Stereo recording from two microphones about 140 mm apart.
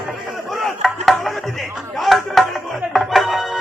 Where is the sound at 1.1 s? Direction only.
Centre (ahead or behind).